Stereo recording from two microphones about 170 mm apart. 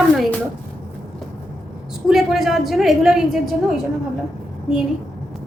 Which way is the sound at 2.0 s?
Centre (ahead or behind).